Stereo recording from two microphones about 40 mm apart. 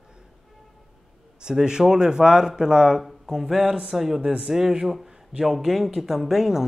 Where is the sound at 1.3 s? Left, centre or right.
Centre.